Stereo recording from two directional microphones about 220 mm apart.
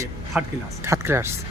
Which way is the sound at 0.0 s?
10° right (ahead or behind).